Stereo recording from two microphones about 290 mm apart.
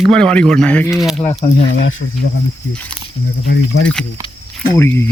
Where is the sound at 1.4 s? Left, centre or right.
Left.